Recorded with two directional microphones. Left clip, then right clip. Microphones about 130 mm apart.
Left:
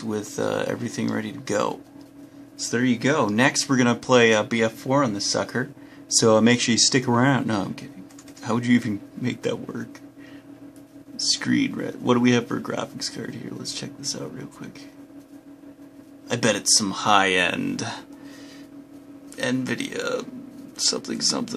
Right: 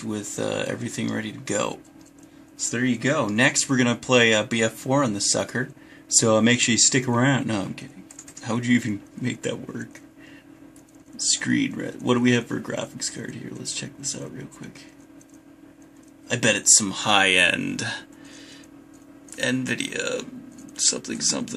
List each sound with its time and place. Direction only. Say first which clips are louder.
0.0 s speech: left 2 dB; 5° right (ahead or behind)
2.6 s speech: left 2 dB; 5° left (ahead or behind)
3.3 s speech: even; 5° right (ahead or behind)
11.1 s speech: left 1 dB; 5° right (ahead or behind)
16.3 s speech: right 1 dB; 10° right (ahead or behind)
19.3 s speech: right 1 dB; 10° right (ahead or behind)